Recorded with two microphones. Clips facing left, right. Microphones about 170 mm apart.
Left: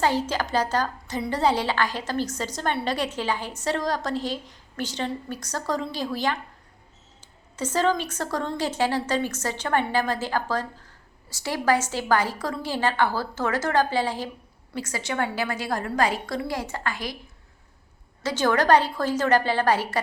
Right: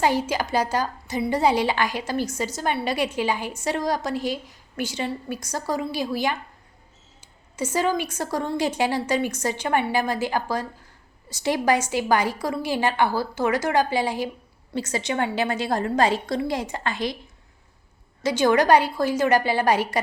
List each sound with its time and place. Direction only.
0.0 s a woman's voice: 10° right (ahead or behind)
18.2 s a woman's voice: 15° right (ahead or behind)